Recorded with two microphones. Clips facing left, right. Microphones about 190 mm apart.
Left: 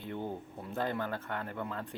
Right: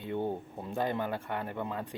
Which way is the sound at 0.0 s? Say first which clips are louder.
Right 5 dB; 15° right (ahead or behind).